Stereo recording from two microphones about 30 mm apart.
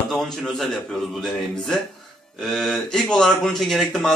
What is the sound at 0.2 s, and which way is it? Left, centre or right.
Speech, centre.